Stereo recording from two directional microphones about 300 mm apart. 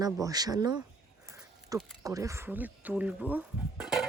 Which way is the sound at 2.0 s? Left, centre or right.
Centre.